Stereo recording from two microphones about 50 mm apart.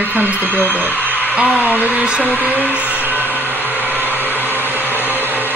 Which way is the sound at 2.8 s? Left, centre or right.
Right.